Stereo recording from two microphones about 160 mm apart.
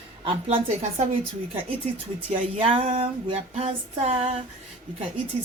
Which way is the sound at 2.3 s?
35° right (ahead or behind).